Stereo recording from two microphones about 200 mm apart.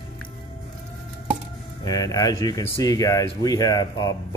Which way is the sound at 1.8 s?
20° left (ahead or behind).